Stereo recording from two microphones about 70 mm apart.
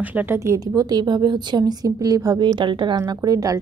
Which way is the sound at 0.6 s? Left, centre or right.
Right.